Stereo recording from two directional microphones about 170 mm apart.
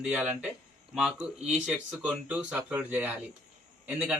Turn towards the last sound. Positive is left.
turn(degrees=-5)  # may be behind; listen again after turning